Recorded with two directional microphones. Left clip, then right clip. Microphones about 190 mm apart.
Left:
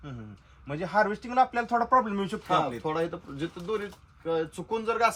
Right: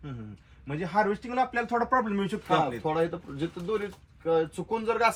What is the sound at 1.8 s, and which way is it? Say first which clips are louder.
Speech: left 3 dB; 35° left (ahead or behind).